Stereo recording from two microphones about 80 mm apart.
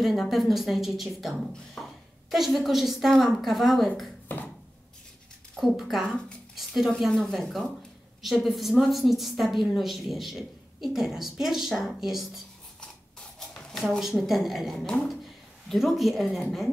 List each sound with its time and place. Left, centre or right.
0.0 s a woman's voice: centre
1.8 s a sound: centre
2.3 s a woman's voice: centre
4.3 s a sound: left
5.6 s a woman's voice: centre
6.0 s speech: centre
6.5 s a sound: centre
7.0 s a woman's voice: centre
13.4 s a woman's voice: centre